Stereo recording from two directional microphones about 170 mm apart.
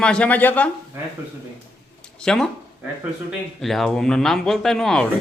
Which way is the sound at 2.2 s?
5° left (ahead or behind).